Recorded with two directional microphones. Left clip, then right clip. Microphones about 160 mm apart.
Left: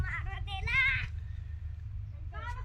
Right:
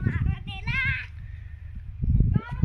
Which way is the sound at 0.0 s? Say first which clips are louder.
Right 3 dB; 90° left.